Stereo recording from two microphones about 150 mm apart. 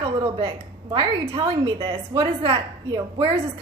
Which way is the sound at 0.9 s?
35° right (ahead or behind).